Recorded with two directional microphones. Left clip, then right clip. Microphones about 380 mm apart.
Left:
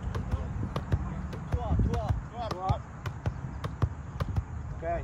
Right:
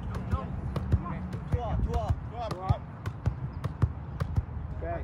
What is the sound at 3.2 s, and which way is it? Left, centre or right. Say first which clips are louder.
Clip-clop: even; centre.